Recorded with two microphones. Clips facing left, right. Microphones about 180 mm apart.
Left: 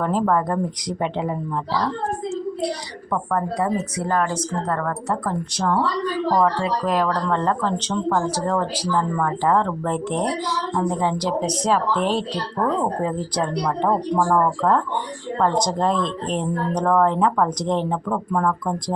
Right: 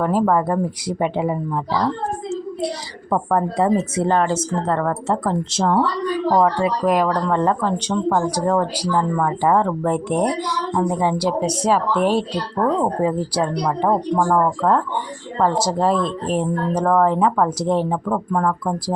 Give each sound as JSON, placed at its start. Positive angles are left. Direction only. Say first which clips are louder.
{"t": 0.0, "sound": "a woman's voice", "louder": "right 3 dB", "side_deg": -5}
{"t": 3.1, "sound": "a woman's voice", "louder": "right 4 dB", "side_deg": -30}